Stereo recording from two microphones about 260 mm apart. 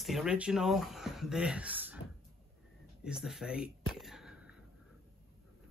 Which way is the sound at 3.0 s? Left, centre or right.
Centre.